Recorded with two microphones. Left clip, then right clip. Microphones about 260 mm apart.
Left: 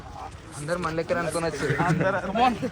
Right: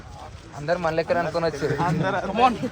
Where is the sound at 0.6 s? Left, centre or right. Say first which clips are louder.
Right 4 dB; right.